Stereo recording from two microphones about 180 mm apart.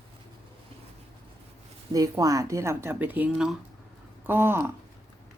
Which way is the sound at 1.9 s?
20° right (ahead or behind).